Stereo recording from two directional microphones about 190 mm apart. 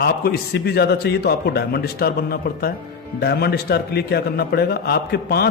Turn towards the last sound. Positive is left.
turn(degrees=55)  # may be behind; listen again after turning